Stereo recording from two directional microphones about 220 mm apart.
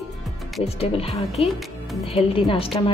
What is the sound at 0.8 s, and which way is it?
A woman's voice, 25° left (ahead or behind).